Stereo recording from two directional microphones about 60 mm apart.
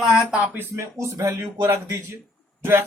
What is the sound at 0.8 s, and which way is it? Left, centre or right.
Speech, right.